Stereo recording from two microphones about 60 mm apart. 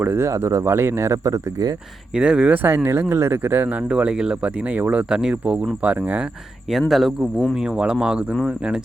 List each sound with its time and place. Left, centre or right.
0.0 s speech: right
0.3 s speech: right
2.1 s speech: centre
3.8 s speech: centre
4.7 s speech: right
5.0 s speech: centre
5.8 s speech: right
6.7 s speech: centre
7.5 s speech: centre